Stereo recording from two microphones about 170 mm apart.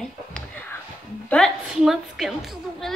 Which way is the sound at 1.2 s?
5° left (ahead or behind).